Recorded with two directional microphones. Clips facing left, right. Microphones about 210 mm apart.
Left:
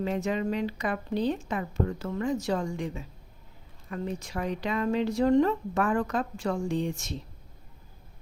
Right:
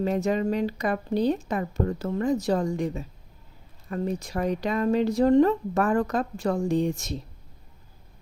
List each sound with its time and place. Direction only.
0.0 s speech: 40° right (ahead or behind)